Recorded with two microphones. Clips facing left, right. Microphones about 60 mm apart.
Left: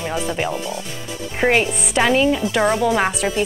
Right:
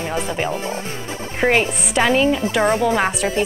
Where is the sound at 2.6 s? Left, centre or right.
Right.